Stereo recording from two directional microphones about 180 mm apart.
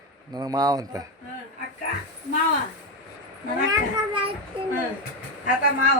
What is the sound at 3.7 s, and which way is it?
Speech, 30° right (ahead or behind).